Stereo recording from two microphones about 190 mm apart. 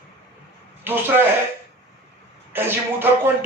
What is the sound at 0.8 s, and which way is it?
Speech, 10° right (ahead or behind).